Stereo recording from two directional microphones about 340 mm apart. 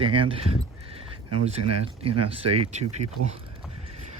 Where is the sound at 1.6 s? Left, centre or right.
Right.